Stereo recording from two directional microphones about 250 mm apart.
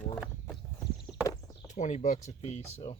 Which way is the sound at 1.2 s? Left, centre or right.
Centre.